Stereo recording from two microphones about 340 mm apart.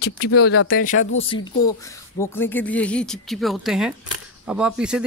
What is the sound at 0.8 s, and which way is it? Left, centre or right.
Speech, left.